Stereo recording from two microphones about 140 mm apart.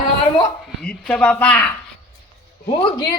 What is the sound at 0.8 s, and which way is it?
Speech, 5° left (ahead or behind).